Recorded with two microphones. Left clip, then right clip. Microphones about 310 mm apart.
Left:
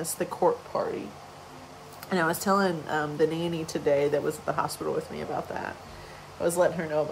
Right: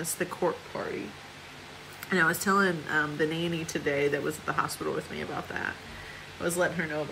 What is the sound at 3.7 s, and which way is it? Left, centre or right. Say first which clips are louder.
Speech: left 4 dB; centre.